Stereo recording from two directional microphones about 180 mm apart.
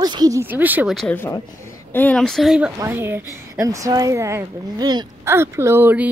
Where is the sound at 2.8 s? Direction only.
15° right (ahead or behind).